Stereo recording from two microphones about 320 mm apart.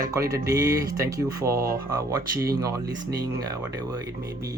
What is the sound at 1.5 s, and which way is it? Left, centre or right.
Speech, right.